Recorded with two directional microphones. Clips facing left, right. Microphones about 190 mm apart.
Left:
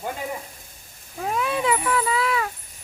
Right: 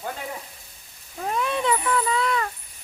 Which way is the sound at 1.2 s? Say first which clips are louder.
Left 1 dB; 5° left (ahead or behind).